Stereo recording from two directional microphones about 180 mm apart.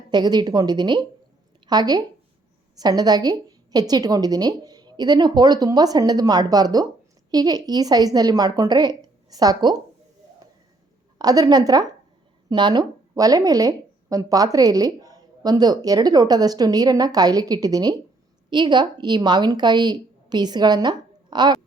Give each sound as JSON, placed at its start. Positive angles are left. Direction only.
{"t": 0.1, "sound": "speech", "side_deg": -25}
{"t": 11.2, "sound": "speech", "side_deg": -20}